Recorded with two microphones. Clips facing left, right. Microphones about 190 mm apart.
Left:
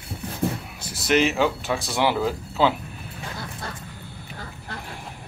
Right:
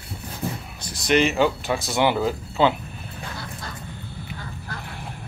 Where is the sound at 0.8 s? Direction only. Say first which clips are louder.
Right 1 dB; 5° left (ahead or behind).